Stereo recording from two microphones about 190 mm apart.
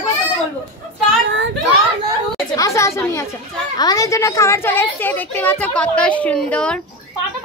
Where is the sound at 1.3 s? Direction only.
80° right.